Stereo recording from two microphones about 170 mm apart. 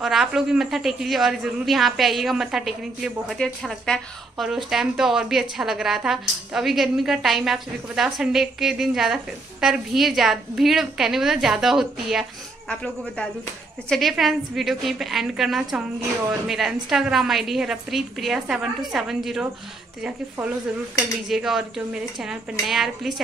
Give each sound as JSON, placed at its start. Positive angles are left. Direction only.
{"t": 0.0, "sound": "a man's voice", "side_deg": 0}
{"t": 21.3, "sound": "a man's voice", "side_deg": -5}